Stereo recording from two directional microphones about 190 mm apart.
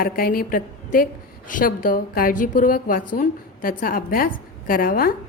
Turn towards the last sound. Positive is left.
turn(degrees=50)  # may be behind; listen again after turning